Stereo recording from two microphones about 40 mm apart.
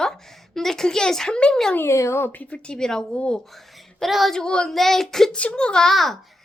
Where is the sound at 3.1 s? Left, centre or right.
Left.